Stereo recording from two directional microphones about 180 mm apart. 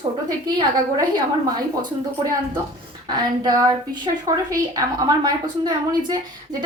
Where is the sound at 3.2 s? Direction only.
20° right (ahead or behind).